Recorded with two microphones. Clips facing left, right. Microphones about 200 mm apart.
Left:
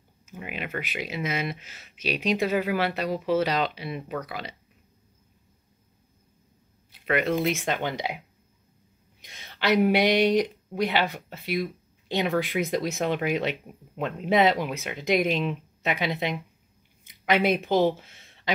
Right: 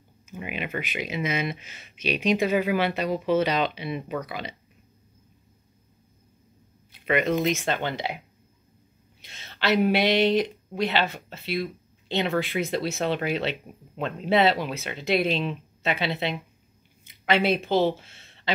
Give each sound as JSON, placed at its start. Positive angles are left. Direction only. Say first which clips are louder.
{"t": 0.4, "sound": "speech", "louder": "right 2 dB", "side_deg": -10}
{"t": 3.6, "sound": "speech", "louder": "right 2 dB", "side_deg": -20}
{"t": 3.9, "sound": "speech", "louder": "right 2 dB", "side_deg": 0}
{"t": 4.3, "sound": "speech", "louder": "right 1 dB", "side_deg": -20}
{"t": 7.3, "sound": "speech", "louder": "right 1 dB", "side_deg": 10}
{"t": 9.2, "sound": "speech", "louder": "even", "side_deg": 15}